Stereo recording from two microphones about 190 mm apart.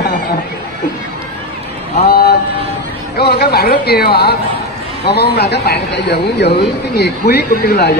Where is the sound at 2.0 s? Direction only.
50° left (ahead or behind).